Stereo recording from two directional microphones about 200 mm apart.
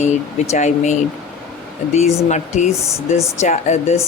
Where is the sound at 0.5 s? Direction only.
35° left (ahead or behind).